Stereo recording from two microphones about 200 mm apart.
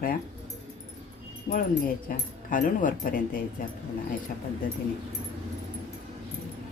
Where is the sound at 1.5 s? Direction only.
45° left (ahead or behind).